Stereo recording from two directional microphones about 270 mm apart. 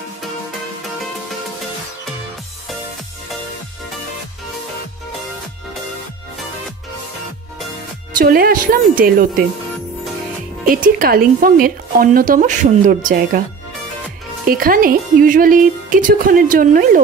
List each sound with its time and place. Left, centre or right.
8.2 s speech: right
10.7 s speech: right
14.5 s speech: right